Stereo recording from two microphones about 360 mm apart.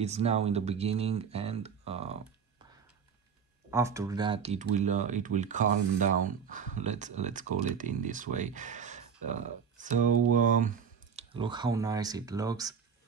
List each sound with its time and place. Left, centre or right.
0.0 s speech: centre
3.7 s speech: centre